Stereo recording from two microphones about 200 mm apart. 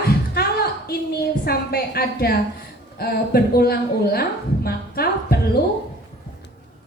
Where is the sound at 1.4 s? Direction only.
50° left (ahead or behind).